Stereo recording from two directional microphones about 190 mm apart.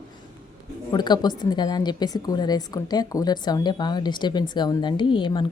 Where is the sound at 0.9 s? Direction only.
20° left (ahead or behind).